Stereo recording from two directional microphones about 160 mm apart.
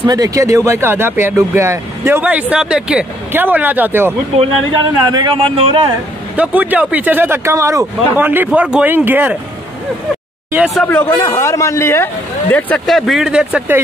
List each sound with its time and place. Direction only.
0.0 s speech: 25° right (ahead or behind)
5.0 s speech: 25° right (ahead or behind)
6.3 s speech: 10° right (ahead or behind)
10.5 s speech: 5° right (ahead or behind)
10.9 s a man's voice: 10° left (ahead or behind); by 13.7 s 5° right (ahead or behind)